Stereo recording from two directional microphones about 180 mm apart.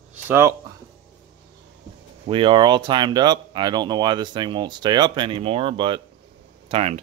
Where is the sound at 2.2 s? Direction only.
30° right (ahead or behind).